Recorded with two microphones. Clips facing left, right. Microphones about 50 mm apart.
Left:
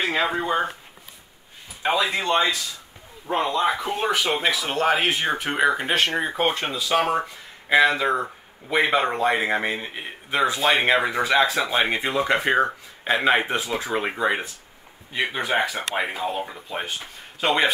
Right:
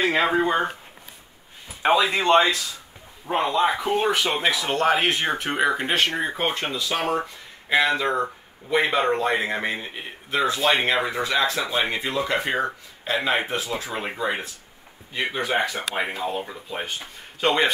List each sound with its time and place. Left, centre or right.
0.0 s speech: centre
1.8 s speech: right
2.1 s speech: right
3.3 s speech: centre
11.7 s speech: left
12.4 s a man's voice: centre